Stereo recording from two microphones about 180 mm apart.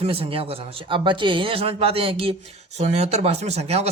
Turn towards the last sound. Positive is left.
turn(degrees=-35)  # may be behind; listen again after turning